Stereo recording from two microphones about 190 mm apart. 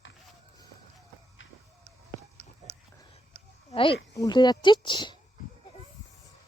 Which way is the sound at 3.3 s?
35° right (ahead or behind).